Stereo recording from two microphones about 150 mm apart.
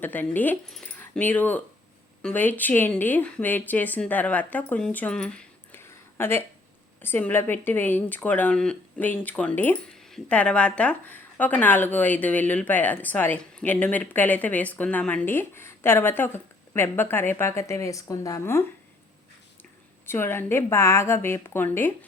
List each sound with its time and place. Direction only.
0.0 s speech: 10° left (ahead or behind)
5.8 s a sound: 15° left (ahead or behind)
7.0 s speech: 10° left (ahead or behind)
20.1 s speech: 15° left (ahead or behind)